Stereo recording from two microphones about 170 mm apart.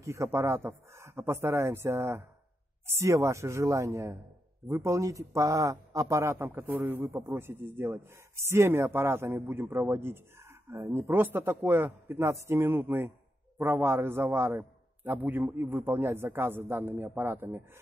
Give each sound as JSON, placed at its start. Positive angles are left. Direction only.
{"t": 0.0, "sound": "speech", "side_deg": -15}